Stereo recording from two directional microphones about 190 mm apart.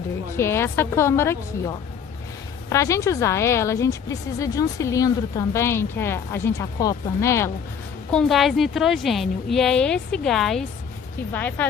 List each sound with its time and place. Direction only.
0.3 s a woman's voice: 15° left (ahead or behind)
8.1 s a woman's voice: centre (ahead or behind)